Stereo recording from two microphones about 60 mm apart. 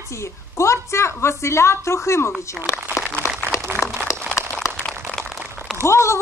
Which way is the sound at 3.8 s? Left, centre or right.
Centre.